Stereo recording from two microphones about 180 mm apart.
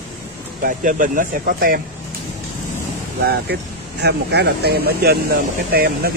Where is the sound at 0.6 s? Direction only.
50° right (ahead or behind).